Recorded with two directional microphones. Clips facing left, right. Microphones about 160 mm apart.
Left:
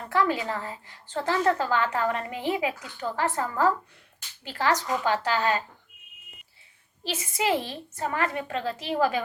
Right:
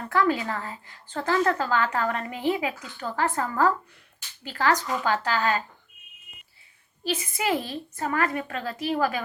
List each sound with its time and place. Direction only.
0.1 s a woman's voice: 20° left (ahead or behind)
7.3 s a woman's voice: 25° left (ahead or behind)